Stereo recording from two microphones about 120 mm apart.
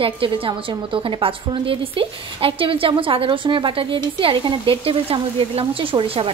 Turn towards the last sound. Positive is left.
turn(degrees=-45)  # may be behind; listen again after turning